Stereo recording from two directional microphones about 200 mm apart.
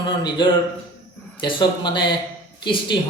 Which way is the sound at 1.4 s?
25° left (ahead or behind).